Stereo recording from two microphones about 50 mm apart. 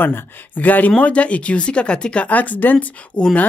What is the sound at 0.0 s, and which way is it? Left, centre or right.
Speech, left.